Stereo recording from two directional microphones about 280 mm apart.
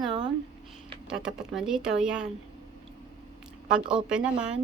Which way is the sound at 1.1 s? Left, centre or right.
Centre.